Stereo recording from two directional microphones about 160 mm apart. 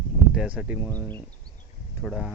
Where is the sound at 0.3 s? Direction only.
10° right (ahead or behind).